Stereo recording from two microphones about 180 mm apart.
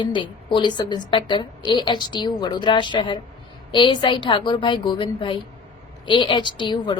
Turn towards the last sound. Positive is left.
turn(degrees=25)  # may be behind; listen again after turning